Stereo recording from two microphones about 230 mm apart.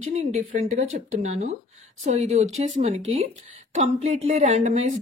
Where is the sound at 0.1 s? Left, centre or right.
Right.